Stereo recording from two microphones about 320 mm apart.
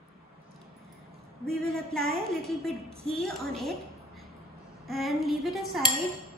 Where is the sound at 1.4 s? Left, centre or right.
Centre.